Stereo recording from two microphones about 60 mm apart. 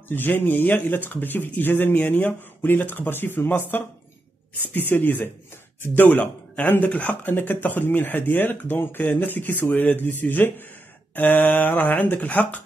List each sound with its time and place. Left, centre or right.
0.1 s speech: left